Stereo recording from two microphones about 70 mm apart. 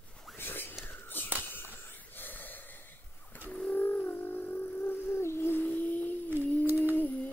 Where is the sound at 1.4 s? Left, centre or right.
Left.